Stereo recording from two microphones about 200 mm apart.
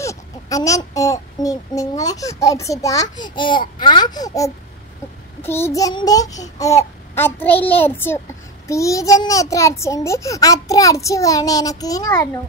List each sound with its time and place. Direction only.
0.0 s speech: 15° left (ahead or behind)